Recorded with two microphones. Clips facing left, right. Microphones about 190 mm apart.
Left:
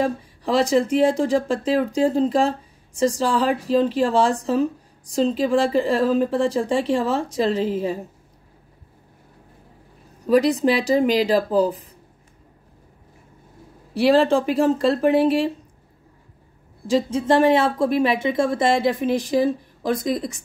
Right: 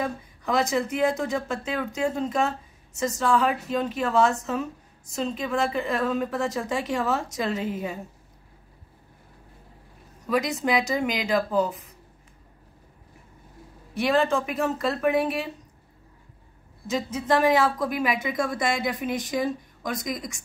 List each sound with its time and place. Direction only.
0.0 s speech: 30° left (ahead or behind)
10.2 s speech: 35° left (ahead or behind)
13.9 s speech: 30° left (ahead or behind)
16.8 s speech: 30° left (ahead or behind)